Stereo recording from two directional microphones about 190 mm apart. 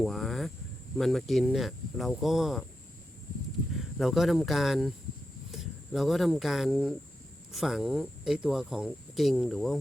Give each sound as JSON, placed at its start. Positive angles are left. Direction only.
{"t": 0.0, "sound": "cricket", "side_deg": 0}
{"t": 0.9, "sound": "speech", "side_deg": 0}
{"t": 3.9, "sound": "speech", "side_deg": 0}